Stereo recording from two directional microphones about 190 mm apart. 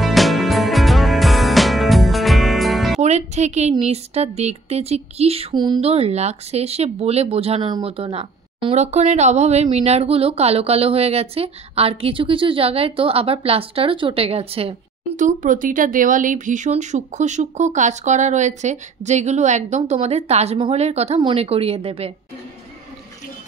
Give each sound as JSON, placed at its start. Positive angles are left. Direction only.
{"t": 0.0, "sound": "music", "side_deg": 0}
{"t": 3.0, "sound": "music", "side_deg": -35}
{"t": 3.8, "sound": "speech", "side_deg": -35}